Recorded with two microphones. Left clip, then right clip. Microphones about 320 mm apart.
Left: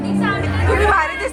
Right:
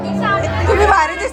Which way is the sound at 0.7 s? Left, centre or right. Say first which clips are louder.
Right 3 dB; centre.